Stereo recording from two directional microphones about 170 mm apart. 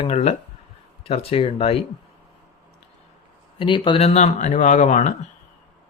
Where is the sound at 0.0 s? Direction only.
40° left (ahead or behind).